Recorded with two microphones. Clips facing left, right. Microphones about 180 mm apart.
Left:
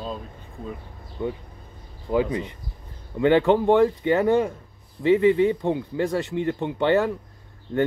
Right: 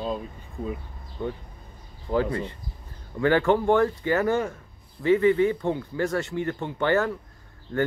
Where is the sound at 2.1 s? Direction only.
15° left (ahead or behind).